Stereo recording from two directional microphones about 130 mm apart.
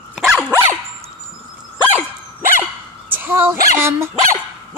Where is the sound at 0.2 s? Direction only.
5° right (ahead or behind).